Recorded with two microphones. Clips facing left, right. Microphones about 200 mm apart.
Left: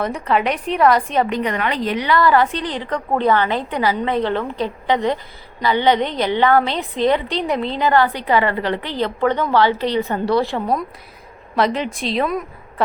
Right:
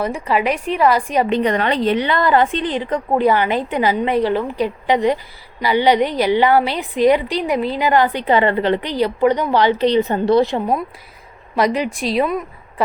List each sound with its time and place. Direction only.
0.0 s a woman's voice: 5° right (ahead or behind)
1.3 s a woman's voice: 30° right (ahead or behind); by 12.4 s 5° right (ahead or behind)